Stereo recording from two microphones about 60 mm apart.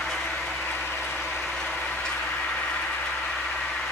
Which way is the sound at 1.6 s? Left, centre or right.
Centre.